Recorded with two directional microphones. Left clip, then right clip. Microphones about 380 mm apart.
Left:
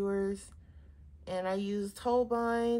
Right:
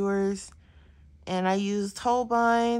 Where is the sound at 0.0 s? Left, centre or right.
Centre.